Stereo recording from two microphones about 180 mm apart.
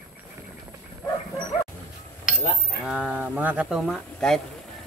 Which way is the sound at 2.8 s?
5° right (ahead or behind).